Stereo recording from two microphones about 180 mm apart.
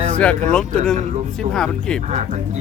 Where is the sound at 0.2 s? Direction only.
5° left (ahead or behind).